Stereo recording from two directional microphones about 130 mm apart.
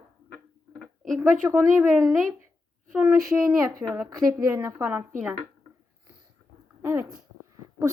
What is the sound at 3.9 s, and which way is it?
Speech, 25° right (ahead or behind).